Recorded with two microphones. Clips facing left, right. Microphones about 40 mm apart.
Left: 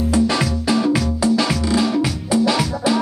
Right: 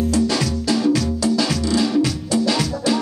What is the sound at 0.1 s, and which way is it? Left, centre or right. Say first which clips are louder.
Music: left 2 dB; left.